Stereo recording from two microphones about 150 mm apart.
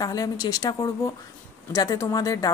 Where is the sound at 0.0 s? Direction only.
25° left (ahead or behind).